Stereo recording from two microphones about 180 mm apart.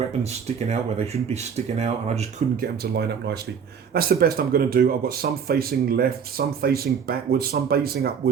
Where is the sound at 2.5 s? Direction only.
60° right (ahead or behind).